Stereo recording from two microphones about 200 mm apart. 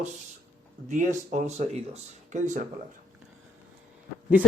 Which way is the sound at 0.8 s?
40° right (ahead or behind).